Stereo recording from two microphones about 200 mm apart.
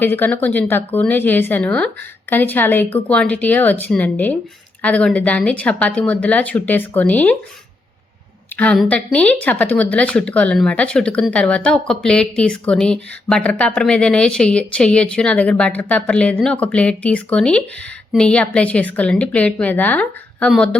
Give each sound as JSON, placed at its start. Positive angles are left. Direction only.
{"t": 0.0, "sound": "speech", "side_deg": 10}
{"t": 8.5, "sound": "speech", "side_deg": 5}